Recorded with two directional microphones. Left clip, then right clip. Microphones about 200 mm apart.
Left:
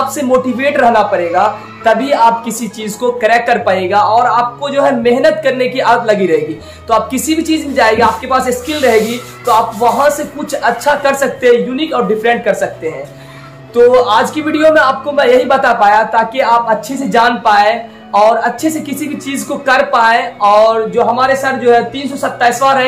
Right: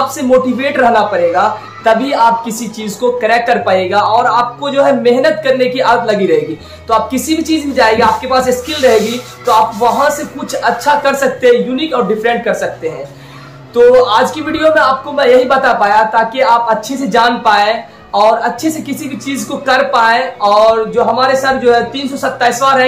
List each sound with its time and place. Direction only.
0.3 s a man's voice: 20° left (ahead or behind)
13.7 s a man's voice: 20° left (ahead or behind)